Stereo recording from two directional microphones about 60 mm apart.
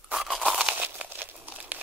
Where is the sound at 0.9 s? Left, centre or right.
Right.